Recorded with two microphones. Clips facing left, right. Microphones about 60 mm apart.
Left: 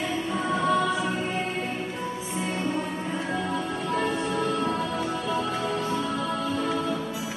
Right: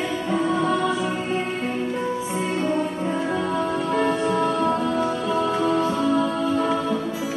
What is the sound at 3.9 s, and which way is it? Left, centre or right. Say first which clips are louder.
Music: right 4 dB; right.